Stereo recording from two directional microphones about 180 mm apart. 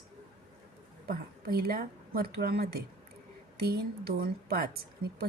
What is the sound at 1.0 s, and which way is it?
A woman's voice, 55° right (ahead or behind).